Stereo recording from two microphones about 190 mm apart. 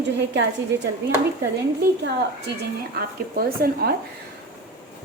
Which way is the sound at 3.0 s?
55° right (ahead or behind).